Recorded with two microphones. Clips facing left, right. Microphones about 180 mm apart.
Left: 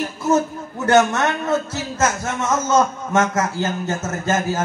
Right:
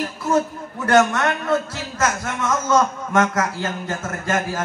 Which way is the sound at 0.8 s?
25° left (ahead or behind).